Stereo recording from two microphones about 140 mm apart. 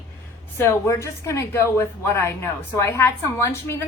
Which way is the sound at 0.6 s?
20° left (ahead or behind).